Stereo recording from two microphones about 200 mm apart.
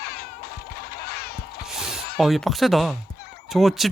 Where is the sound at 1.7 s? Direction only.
5° right (ahead or behind).